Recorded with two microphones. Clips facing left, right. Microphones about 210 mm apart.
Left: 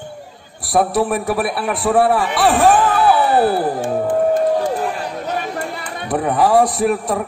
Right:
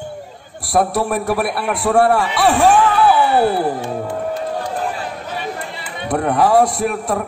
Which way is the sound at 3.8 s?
50° left (ahead or behind).